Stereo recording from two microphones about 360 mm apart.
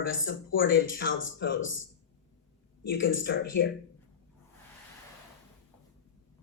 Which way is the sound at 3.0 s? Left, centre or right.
Left.